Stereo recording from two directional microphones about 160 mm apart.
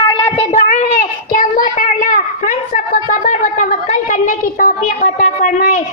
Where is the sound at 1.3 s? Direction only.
55° left (ahead or behind).